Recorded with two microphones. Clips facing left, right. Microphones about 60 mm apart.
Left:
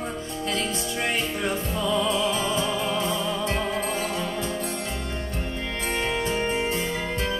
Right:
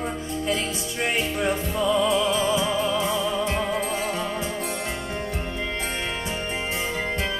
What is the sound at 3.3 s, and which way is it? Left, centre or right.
Music, centre.